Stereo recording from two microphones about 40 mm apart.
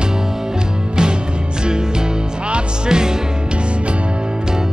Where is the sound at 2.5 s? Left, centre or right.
Centre.